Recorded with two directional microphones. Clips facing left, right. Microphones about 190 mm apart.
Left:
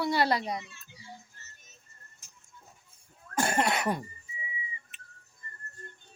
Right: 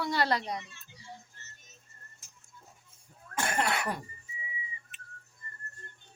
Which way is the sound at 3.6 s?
20° left (ahead or behind).